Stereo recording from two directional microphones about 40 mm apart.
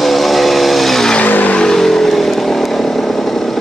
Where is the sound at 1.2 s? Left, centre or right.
Left.